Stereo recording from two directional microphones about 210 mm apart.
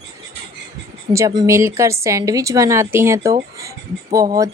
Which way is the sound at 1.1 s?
15° right (ahead or behind).